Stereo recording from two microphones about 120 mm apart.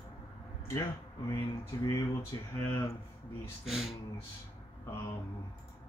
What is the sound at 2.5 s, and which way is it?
Speech, 20° left (ahead or behind).